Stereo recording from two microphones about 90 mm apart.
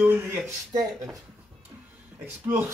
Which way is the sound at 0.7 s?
45° right (ahead or behind).